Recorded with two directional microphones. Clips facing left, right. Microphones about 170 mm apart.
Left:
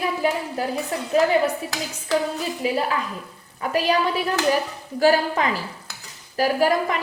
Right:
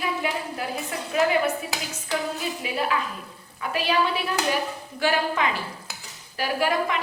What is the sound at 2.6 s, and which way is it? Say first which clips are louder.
A woman's voice: left 4 dB; 35° left (ahead or behind).